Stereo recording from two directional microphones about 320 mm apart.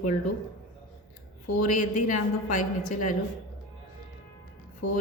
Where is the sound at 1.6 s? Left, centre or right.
Left.